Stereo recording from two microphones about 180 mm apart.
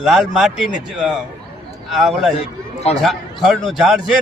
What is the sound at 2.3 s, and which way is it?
Speech, 35° left (ahead or behind).